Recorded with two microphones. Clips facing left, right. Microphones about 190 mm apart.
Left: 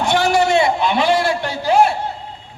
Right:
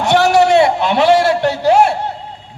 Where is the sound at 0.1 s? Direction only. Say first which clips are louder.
Right 6 dB; 70° right (ahead or behind).